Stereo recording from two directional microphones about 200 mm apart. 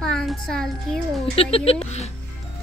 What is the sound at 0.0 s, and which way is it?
Music, centre (ahead or behind).